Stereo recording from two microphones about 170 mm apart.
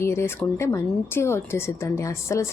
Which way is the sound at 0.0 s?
15° left (ahead or behind).